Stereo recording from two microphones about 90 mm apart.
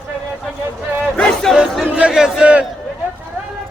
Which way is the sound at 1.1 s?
5° left (ahead or behind).